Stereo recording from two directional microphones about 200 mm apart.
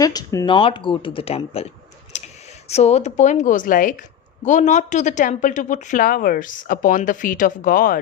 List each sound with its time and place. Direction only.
0.0 s speech: 20° left (ahead or behind)
2.1 s clicking: 35° left (ahead or behind)
2.6 s a woman's voice: 30° left (ahead or behind)